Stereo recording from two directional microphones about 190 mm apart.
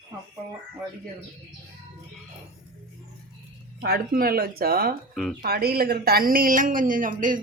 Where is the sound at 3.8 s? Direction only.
55° right (ahead or behind).